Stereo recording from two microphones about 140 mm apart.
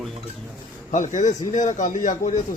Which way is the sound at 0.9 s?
60° left (ahead or behind).